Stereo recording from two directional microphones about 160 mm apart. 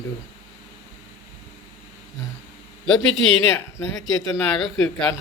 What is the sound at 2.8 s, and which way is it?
Speech, 5° left (ahead or behind).